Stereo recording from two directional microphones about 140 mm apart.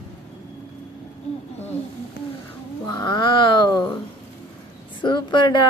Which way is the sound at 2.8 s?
30° left (ahead or behind).